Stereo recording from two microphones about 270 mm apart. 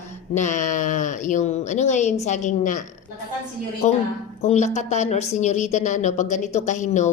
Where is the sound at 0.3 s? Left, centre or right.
Left.